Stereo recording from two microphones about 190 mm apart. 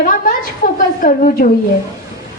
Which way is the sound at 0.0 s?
45° left (ahead or behind).